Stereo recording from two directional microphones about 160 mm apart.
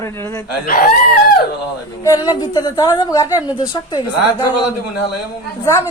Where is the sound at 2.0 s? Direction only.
20° left (ahead or behind).